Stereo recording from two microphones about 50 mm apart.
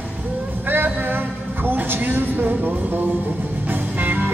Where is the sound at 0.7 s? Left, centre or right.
Right.